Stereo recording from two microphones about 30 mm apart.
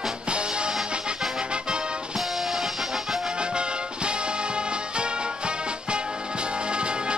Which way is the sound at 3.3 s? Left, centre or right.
Right.